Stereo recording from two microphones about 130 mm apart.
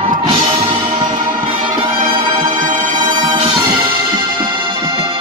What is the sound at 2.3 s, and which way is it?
Music, 90° right.